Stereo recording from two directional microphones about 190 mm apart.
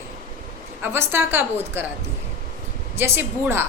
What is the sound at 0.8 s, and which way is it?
Speech, 10° right (ahead or behind).